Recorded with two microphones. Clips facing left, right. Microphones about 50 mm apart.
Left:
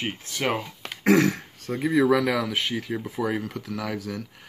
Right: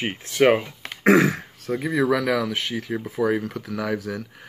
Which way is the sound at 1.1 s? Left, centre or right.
Centre.